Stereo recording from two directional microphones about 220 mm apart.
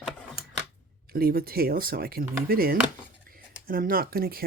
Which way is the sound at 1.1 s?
45° right (ahead or behind).